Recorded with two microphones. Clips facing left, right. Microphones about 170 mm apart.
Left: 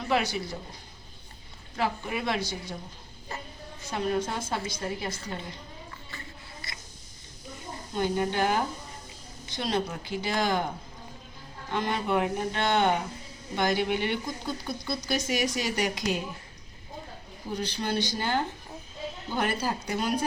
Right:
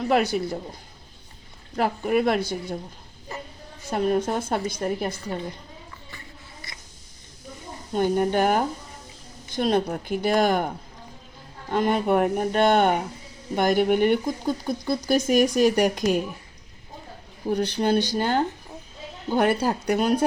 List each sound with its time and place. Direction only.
0.1 s speech: 50° right (ahead or behind)
1.7 s speech: 50° right (ahead or behind)
3.9 s speech: 45° right (ahead or behind)
7.9 s speech: 50° right (ahead or behind)
11.7 s speech: 50° right (ahead or behind)
17.5 s speech: 65° right (ahead or behind)